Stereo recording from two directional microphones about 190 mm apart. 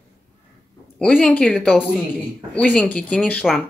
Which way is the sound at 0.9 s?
5° left (ahead or behind).